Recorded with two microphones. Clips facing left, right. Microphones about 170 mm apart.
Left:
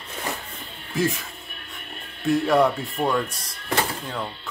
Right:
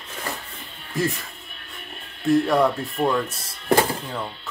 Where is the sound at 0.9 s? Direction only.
Centre (ahead or behind).